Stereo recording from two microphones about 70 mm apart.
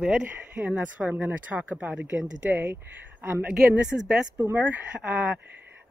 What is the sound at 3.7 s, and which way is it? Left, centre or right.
Speech, centre.